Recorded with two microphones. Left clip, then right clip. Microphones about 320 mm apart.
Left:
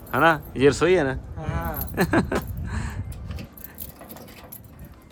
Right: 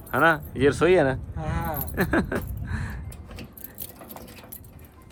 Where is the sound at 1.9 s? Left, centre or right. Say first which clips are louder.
Left 3 dB; centre.